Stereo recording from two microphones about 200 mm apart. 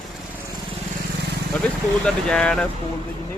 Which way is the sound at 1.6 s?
5° left (ahead or behind).